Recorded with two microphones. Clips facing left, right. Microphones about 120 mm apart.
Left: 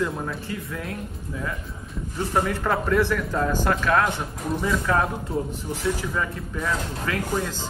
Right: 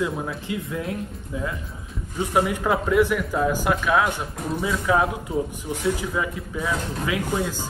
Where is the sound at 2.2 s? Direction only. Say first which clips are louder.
Right 2 dB; 10° right (ahead or behind).